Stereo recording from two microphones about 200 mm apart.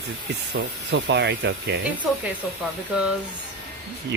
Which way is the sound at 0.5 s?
55° right (ahead or behind).